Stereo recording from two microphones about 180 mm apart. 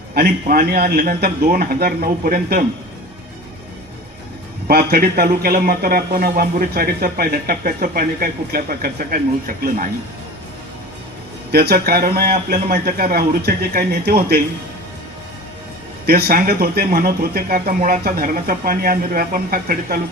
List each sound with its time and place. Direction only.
0.1 s speech: 55° right (ahead or behind)
4.7 s speech: 60° right (ahead or behind)
11.5 s speech: 60° right (ahead or behind)
16.0 s speech: 60° right (ahead or behind)